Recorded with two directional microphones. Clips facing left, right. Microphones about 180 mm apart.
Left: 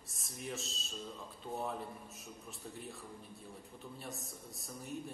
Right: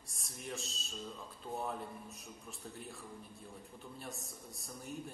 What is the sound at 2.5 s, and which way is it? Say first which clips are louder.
Speech: left 1 dB; centre (ahead or behind).